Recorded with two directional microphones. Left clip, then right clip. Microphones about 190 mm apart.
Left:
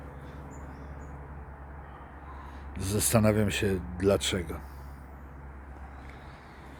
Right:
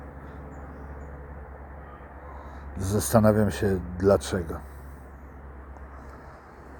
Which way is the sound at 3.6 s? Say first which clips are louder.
Right 3 dB; 30° left (ahead or behind).